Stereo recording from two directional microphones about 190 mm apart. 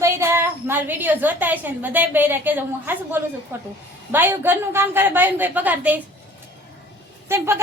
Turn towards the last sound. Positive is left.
turn(degrees=-15)  # may be behind; listen again after turning